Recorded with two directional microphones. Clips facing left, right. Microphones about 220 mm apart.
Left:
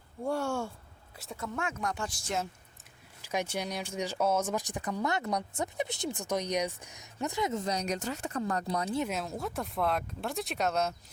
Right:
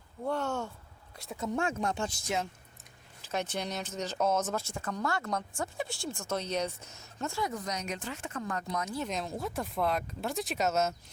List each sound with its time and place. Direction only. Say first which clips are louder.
0.3 s speech: left 1 dB; 10° left (ahead or behind)
1.4 s speech: right 4 dB; 30° right (ahead or behind)
3.2 s speech: left 1 dB; 10° left (ahead or behind); by 9.0 s 35° left (ahead or behind)
9.0 s speech: even; 5° left (ahead or behind)